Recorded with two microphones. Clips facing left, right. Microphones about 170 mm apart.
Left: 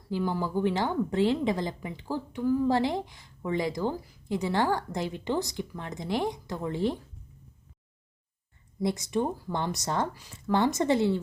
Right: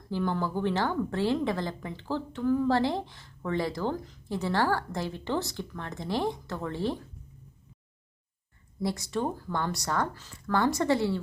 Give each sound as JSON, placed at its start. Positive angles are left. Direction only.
{"t": 0.1, "sound": "a woman's voice", "side_deg": 10}
{"t": 8.8, "sound": "speech", "side_deg": 20}